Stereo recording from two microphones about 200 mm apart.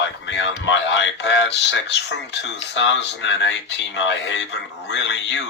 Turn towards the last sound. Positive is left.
turn(degrees=60)  # may be behind; listen again after turning